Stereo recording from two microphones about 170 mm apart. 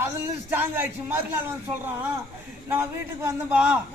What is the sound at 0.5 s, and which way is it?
Speech, 10° right (ahead or behind).